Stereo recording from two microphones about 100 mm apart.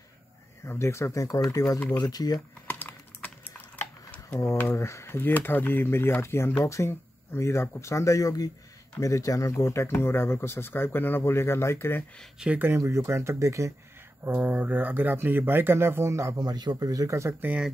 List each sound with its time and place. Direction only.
0.7 s speech: 25° left (ahead or behind)
2.7 s typing: 15° left (ahead or behind)
4.6 s speech: 25° left (ahead or behind)
12.4 s speech: 15° right (ahead or behind); by 13.7 s 30° right (ahead or behind)
14.2 s speech: 20° right (ahead or behind)
16.3 s speech: 45° right (ahead or behind); by 17.6 s 20° right (ahead or behind)